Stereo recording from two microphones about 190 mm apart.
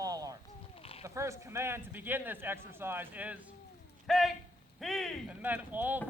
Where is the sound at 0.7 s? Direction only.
30° left (ahead or behind).